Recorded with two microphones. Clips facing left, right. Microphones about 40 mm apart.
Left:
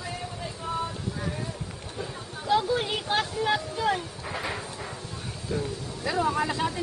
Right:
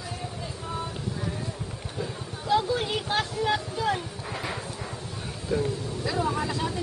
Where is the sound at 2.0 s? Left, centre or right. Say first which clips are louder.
Right 2 dB; centre.